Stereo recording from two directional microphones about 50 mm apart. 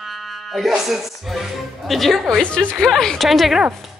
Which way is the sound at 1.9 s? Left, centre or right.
Centre.